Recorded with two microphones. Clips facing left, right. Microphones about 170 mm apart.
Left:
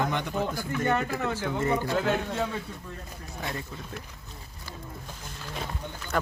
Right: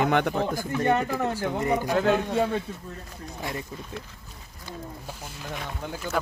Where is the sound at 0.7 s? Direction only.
35° right (ahead or behind).